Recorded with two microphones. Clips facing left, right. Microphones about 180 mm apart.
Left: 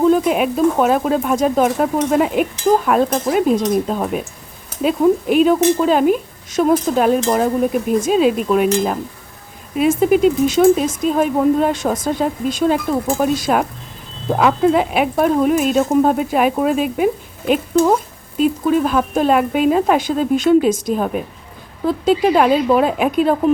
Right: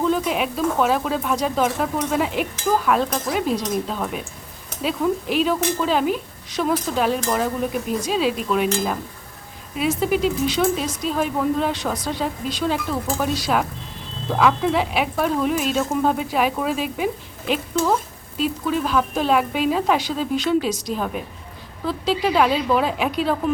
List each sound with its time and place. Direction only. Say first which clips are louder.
0.0 s speech: left 7 dB; 50° left (ahead or behind)